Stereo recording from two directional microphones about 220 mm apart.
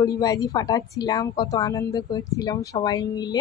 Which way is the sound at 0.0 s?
15° left (ahead or behind).